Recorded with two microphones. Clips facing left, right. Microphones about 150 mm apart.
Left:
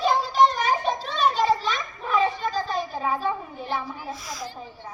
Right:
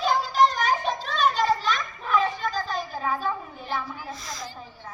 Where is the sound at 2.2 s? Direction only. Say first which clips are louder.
Left 2 dB; 30° left (ahead or behind).